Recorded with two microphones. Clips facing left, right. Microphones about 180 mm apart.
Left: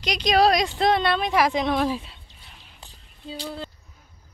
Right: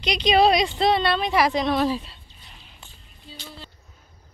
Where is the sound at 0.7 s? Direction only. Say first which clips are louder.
Even; 5° left (ahead or behind).